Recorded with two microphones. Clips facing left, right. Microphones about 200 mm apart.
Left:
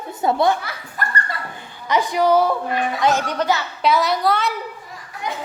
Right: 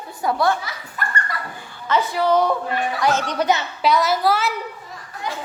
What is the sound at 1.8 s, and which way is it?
Speech, 15° left (ahead or behind).